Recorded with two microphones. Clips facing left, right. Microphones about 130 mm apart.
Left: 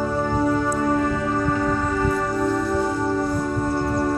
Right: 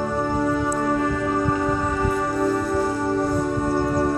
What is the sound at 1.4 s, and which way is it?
Music, 10° right (ahead or behind).